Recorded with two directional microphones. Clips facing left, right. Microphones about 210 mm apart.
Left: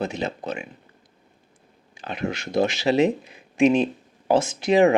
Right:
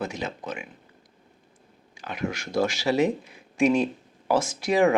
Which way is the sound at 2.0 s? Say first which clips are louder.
Left 2 dB; 25° left (ahead or behind).